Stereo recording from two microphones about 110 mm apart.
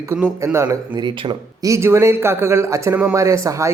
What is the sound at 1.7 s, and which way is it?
Speech, 25° right (ahead or behind).